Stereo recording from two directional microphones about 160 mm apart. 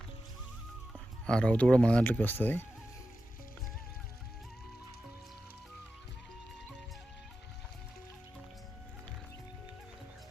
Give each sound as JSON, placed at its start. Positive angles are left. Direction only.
{"t": 0.9, "sound": "speech", "side_deg": 5}